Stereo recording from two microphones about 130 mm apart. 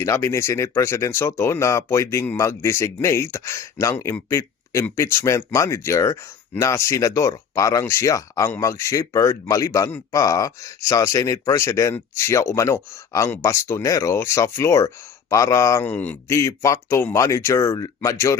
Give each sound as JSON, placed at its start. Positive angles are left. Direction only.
{"t": 0.0, "sound": "speech", "side_deg": 20}